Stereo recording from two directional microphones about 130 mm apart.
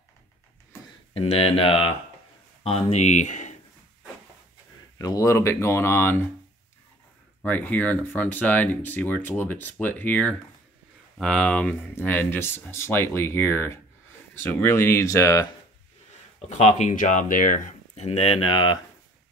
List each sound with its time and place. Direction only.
1.1 s speech: 50° left (ahead or behind); by 3.5 s 65° left (ahead or behind)
4.9 s speech: 25° left (ahead or behind)
7.4 s speech: 10° left (ahead or behind)
16.3 s speech: 55° left (ahead or behind); by 17.7 s 90° left
17.9 s speech: 50° left (ahead or behind)